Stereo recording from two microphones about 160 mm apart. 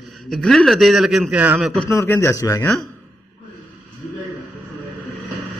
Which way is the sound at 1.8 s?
15° left (ahead or behind).